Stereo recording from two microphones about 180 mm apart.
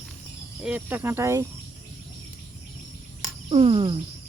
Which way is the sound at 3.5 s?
30° right (ahead or behind).